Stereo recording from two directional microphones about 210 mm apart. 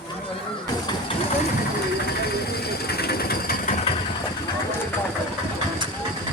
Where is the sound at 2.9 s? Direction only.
50° left (ahead or behind).